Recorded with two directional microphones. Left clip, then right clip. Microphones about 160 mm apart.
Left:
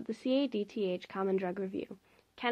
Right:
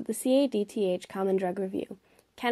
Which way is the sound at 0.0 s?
30° right (ahead or behind).